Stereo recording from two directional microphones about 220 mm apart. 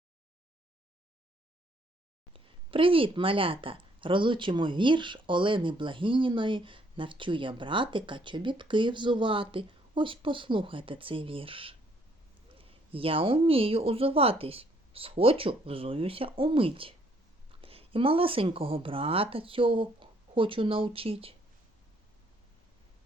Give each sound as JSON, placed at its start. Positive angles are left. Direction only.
{"t": 2.3, "sound": "a woman's voice", "side_deg": -25}